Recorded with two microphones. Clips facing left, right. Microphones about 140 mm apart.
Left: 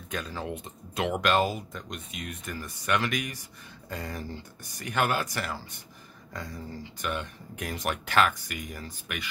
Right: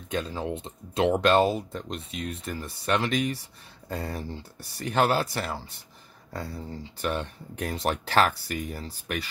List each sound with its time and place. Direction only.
0.1 s speech: 25° right (ahead or behind)